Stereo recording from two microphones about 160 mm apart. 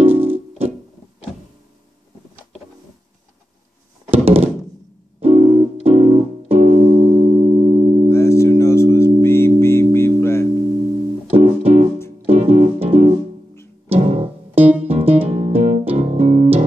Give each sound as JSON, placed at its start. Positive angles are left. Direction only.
{"t": 0.0, "sound": "music", "side_deg": -35}
{"t": 4.1, "sound": "thunk", "side_deg": -35}
{"t": 5.2, "sound": "music", "side_deg": -40}
{"t": 8.1, "sound": "music", "side_deg": 15}
{"t": 11.2, "sound": "music", "side_deg": -40}